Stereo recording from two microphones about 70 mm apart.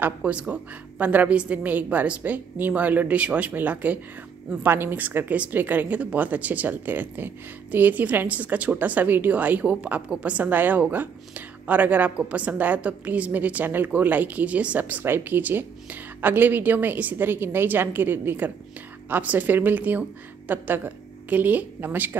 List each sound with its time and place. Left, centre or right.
0.0 s a woman's voice: centre